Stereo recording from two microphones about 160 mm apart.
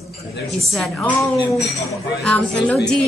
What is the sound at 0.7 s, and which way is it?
Speech, centre (ahead or behind).